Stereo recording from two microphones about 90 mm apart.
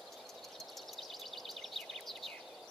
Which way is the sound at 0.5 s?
Centre (ahead or behind).